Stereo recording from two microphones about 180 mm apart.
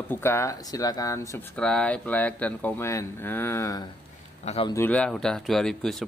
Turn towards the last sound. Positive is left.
turn(degrees=0)  # may be behind; listen again after turning